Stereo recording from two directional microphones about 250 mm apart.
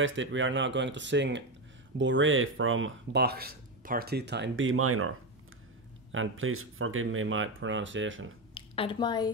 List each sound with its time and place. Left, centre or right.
0.0 s speech: right
6.1 s speech: right
8.5 s a woman's voice: left